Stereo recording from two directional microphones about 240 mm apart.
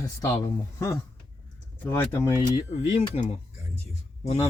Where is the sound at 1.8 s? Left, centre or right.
Centre.